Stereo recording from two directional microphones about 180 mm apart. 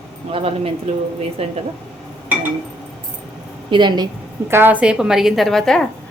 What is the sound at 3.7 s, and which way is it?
Speech, 25° right (ahead or behind).